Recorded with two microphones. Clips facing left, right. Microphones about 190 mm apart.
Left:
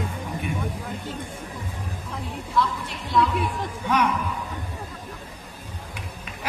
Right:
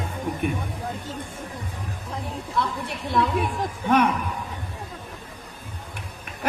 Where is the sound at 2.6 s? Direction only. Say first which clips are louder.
Left 2 dB; 55° right (ahead or behind).